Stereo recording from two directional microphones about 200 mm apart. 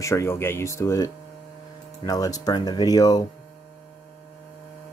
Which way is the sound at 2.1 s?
20° left (ahead or behind).